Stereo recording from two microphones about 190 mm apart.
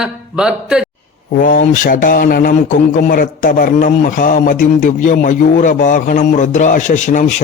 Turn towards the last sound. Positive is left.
turn(degrees=40)  # may be behind; listen again after turning